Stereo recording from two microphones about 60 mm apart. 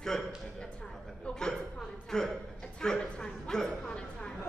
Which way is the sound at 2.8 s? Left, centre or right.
Centre.